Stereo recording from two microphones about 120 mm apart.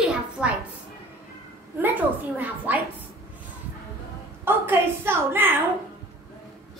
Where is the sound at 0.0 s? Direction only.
10° right (ahead or behind).